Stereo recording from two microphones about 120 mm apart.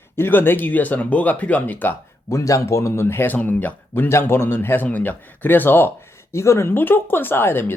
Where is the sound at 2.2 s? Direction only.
25° left (ahead or behind).